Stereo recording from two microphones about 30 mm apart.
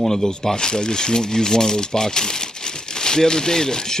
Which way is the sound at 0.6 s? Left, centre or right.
Left.